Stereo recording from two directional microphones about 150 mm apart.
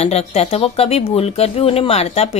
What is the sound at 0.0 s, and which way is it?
A woman's voice, 45° left (ahead or behind).